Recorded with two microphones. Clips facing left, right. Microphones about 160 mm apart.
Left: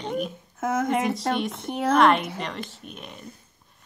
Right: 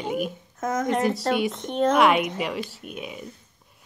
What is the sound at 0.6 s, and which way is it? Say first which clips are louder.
Speech: even; 5° left (ahead or behind).